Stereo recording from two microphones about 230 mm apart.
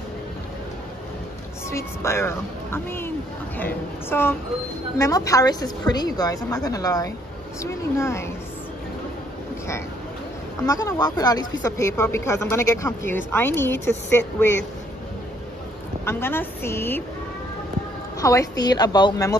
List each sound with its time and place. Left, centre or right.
1.7 s speech: centre
10.6 s speech: centre
16.1 s speech: centre
18.2 s speech: centre